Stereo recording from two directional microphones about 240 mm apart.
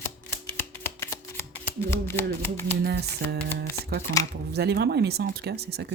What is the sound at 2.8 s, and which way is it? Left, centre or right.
Speech, right.